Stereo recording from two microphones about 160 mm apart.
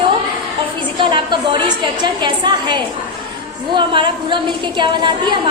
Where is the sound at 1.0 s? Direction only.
30° right (ahead or behind).